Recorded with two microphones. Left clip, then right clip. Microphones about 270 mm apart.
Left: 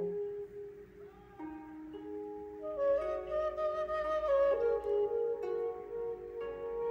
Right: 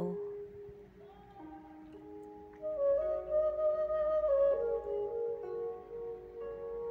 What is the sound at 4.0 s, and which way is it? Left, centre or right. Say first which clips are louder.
Flute: left 1 dB; left.